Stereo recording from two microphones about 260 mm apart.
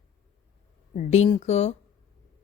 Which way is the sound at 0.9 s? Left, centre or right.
Left.